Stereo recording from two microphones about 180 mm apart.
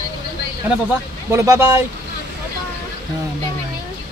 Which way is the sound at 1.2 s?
15° right (ahead or behind).